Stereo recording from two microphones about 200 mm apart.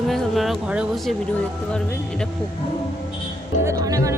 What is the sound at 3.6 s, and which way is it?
Speech, 15° right (ahead or behind).